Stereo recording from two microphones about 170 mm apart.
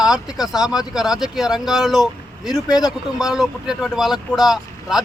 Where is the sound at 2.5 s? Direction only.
20° left (ahead or behind).